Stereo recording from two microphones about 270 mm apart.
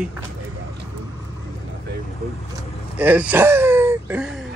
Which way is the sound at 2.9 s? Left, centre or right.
Centre.